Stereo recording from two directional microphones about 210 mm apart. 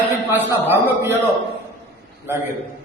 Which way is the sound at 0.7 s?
10° right (ahead or behind).